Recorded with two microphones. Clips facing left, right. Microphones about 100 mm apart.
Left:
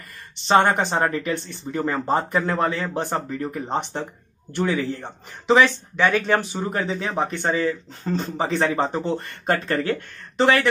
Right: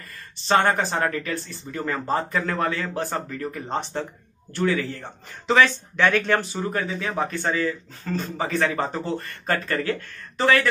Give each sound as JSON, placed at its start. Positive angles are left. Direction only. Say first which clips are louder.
{"t": 0.5, "sound": "a man's voice", "louder": "left 2 dB", "side_deg": 20}
{"t": 6.7, "sound": "a man's voice", "louder": "left 3 dB", "side_deg": 25}